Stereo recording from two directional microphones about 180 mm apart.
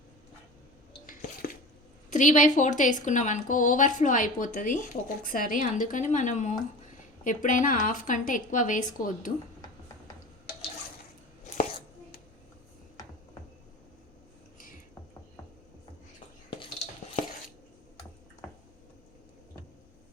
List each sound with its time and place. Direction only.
1.0 s drip: 50° left (ahead or behind)
2.0 s a woman's voice: 45° left (ahead or behind)
16.5 s a sound: 30° left (ahead or behind)